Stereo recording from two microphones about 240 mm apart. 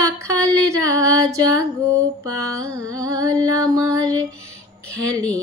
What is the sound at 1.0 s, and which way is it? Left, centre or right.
Music, centre.